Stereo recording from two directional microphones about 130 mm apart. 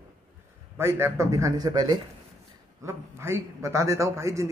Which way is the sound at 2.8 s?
20° right (ahead or behind).